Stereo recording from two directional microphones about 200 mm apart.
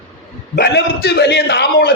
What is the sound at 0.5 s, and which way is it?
A man's voice, 55° left (ahead or behind).